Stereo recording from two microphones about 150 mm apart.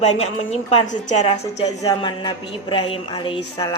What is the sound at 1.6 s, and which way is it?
Speech, 25° left (ahead or behind).